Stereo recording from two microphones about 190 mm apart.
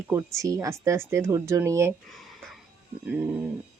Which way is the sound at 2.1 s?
Centre (ahead or behind).